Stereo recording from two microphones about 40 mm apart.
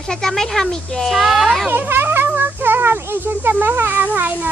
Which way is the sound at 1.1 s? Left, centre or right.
Centre.